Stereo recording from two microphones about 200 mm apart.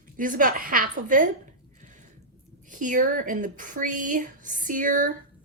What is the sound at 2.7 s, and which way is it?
A woman's voice, 40° right (ahead or behind).